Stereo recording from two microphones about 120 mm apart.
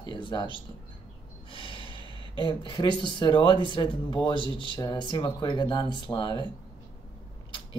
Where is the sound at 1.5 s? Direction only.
45° left (ahead or behind).